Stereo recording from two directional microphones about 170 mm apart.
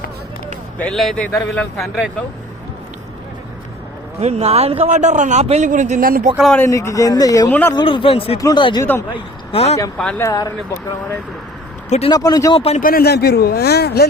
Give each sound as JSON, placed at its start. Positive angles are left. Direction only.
{"t": 0.8, "sound": "a man's voice", "side_deg": 5}
{"t": 4.2, "sound": "a man's voice", "side_deg": -40}
{"t": 6.3, "sound": "a man's voice", "side_deg": 0}
{"t": 6.6, "sound": "speech", "side_deg": 15}
{"t": 10.0, "sound": "a man's voice", "side_deg": 5}
{"t": 10.2, "sound": "speech", "side_deg": 20}
{"t": 11.9, "sound": "speech", "side_deg": 40}
{"t": 12.1, "sound": "speech", "side_deg": 20}
{"t": 12.8, "sound": "a man's voice", "side_deg": 60}